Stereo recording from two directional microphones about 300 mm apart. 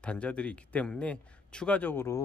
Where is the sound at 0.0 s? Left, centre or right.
Centre.